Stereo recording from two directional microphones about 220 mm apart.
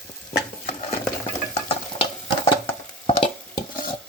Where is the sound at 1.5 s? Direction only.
25° left (ahead or behind).